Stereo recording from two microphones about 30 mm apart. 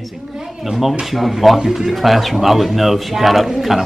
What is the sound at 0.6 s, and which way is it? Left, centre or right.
A man's voice, centre.